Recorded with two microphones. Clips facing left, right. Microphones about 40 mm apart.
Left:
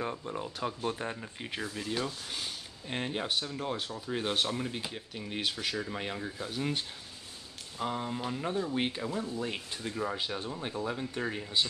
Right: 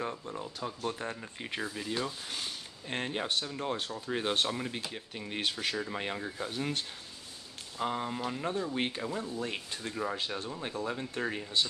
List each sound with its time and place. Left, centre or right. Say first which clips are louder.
0.0 s speech: left 2 dB; centre
1.2 s speech: right 1 dB; centre
7.8 s speech: right 1 dB; centre